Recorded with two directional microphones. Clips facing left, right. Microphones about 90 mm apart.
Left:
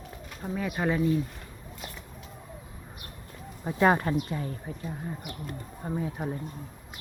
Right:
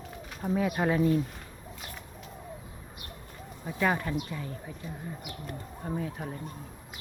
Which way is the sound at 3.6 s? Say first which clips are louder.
Left 5 dB; 40° left (ahead or behind).